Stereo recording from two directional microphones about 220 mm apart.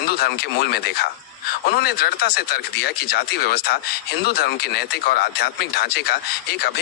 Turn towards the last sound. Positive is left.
turn(degrees=45)  # may be behind; listen again after turning